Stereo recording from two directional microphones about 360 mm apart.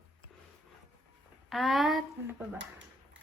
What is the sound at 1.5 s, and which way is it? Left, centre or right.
Speech, centre.